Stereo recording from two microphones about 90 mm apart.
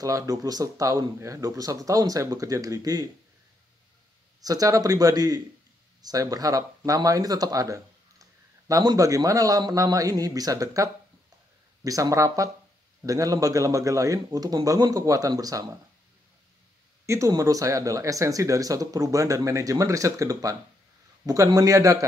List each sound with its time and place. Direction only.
0.0 s speech: 40° right (ahead or behind)
4.4 s speech: 40° right (ahead or behind)
17.0 s speech: 30° right (ahead or behind)